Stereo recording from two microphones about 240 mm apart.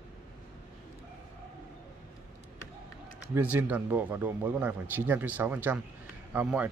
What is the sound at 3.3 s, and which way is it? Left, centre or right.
Speech, centre.